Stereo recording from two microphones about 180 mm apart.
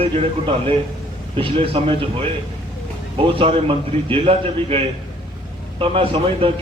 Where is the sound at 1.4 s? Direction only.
30° right (ahead or behind).